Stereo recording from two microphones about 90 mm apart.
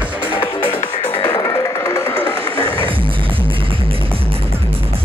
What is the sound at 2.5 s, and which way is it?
Music, 90° right.